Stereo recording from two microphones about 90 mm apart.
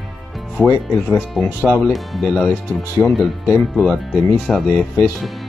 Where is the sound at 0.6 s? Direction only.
20° left (ahead or behind).